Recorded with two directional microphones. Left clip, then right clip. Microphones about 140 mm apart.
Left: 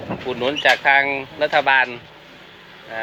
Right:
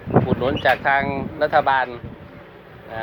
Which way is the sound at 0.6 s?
75° left (ahead or behind).